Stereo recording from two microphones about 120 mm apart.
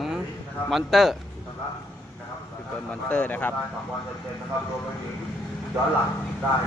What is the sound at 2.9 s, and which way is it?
Speech, 10° left (ahead or behind).